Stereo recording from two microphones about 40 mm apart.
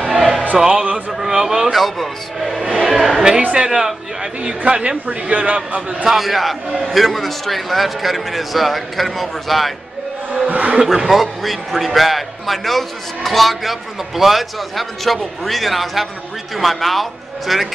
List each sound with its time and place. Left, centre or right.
0.1 s choir: centre
0.7 s a sound: right
1.2 s a sound: centre
1.7 s a man's voice: centre
2.8 s a sound: centre
3.2 s a man's voice: centre
4.4 s speech: right
5.0 s a man's voice: right
6.0 s a man's voice: centre
10.5 s speech: right
11.1 s a man's voice: centre